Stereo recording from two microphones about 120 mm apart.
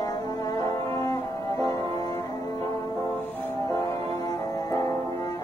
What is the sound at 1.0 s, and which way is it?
Music, 30° left (ahead or behind).